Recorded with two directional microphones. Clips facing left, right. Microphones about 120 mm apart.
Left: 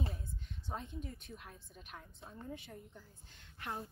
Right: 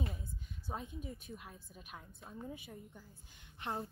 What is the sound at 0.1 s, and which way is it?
A woman's voice, 5° right (ahead or behind).